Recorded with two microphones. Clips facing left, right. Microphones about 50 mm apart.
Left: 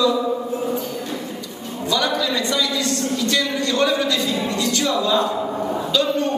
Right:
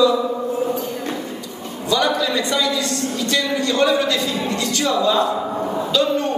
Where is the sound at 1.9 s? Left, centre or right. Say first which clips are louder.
Right 2 dB; centre.